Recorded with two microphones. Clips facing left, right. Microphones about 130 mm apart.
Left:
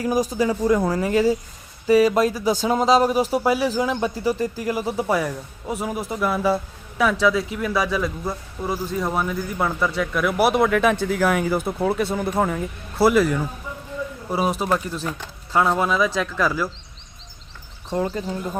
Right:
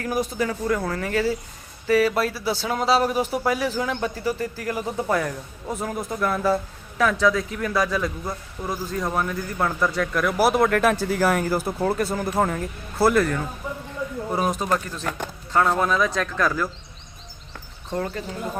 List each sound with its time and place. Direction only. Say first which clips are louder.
0.3 s a man's voice: left 5 dB; 15° left (ahead or behind)
17.9 s a man's voice: left 4 dB; 15° left (ahead or behind)